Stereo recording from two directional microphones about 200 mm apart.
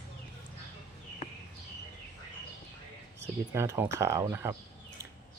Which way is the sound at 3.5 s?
15° right (ahead or behind).